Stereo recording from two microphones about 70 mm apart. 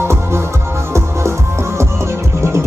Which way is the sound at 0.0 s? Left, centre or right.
Right.